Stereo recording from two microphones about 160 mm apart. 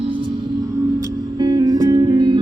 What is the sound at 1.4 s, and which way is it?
Music, 25° right (ahead or behind).